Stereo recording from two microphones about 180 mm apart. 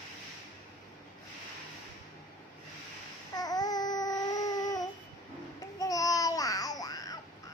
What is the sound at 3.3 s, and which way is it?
Babbling, 20° left (ahead or behind).